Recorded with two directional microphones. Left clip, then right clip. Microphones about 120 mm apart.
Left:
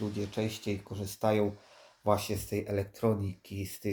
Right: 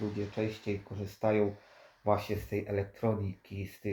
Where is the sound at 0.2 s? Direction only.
35° left (ahead or behind).